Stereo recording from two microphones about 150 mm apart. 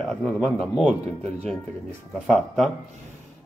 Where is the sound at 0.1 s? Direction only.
5° left (ahead or behind).